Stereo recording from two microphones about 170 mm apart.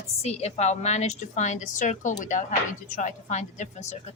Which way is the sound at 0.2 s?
40° left (ahead or behind).